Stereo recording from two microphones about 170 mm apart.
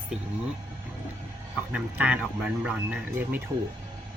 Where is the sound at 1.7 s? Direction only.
5° right (ahead or behind).